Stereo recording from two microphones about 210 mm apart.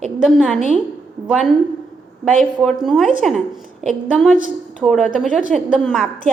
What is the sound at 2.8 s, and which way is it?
A woman's voice, centre (ahead or behind).